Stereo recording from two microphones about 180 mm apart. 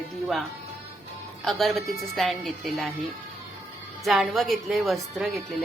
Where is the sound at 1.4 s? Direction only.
Centre (ahead or behind).